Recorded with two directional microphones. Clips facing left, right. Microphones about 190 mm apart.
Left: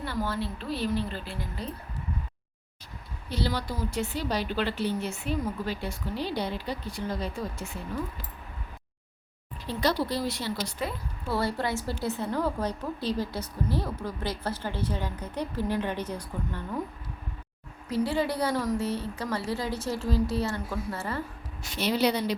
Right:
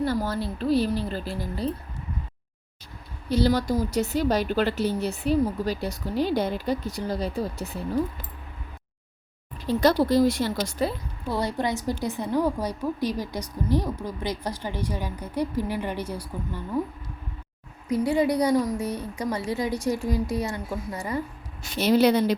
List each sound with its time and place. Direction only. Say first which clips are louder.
0.0 s a woman's voice: right 5 dB; 40° right (ahead or behind)
3.2 s a woman's voice: right 9 dB; 40° right (ahead or behind)
9.6 s a woman's voice: right 7 dB; 45° right (ahead or behind)
11.3 s a woman's voice: right 2 dB; 15° right (ahead or behind)
18.0 s a woman's voice: right 5 dB; 15° right (ahead or behind)
21.8 s a woman's voice: right 6 dB; 45° right (ahead or behind)